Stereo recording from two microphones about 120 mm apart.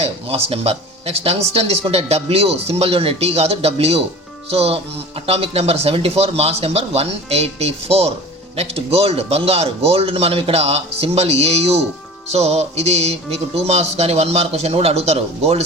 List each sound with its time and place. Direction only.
0.0 s speech: 55° right (ahead or behind)